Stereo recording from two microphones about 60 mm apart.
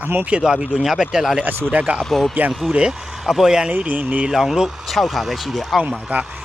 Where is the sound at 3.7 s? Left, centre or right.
Right.